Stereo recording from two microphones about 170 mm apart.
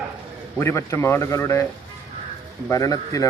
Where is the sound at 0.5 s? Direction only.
15° left (ahead or behind).